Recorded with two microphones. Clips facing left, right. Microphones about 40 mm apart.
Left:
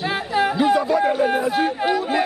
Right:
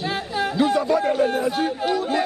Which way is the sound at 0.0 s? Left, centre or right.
Centre.